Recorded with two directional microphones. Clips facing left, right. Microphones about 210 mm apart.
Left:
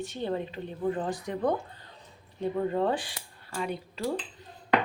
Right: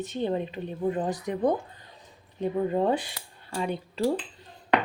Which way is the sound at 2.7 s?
20° right (ahead or behind).